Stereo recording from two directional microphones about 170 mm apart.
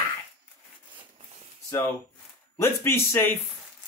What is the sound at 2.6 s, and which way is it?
Speech, 15° left (ahead or behind).